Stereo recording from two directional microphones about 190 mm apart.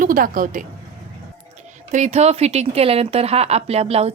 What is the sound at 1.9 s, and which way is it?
Speech, 35° right (ahead or behind).